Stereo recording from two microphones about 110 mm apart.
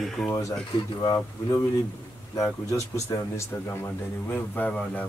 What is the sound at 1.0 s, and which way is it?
Speech, 35° left (ahead or behind).